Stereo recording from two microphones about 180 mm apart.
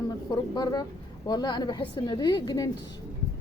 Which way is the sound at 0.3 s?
25° left (ahead or behind).